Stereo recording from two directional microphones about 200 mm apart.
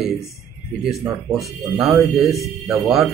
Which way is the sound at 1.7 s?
5° right (ahead or behind).